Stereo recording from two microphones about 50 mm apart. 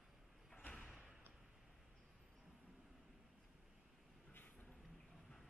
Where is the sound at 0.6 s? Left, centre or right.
Left.